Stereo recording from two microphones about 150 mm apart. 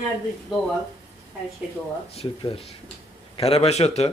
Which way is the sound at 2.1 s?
40° left (ahead or behind).